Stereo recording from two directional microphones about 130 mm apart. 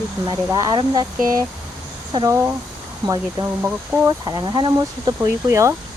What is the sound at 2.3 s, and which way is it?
Speech, 20° right (ahead or behind).